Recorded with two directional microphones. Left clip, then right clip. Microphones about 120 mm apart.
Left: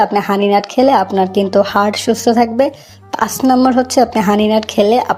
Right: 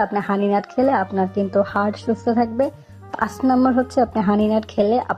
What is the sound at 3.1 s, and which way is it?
Speech, 35° left (ahead or behind).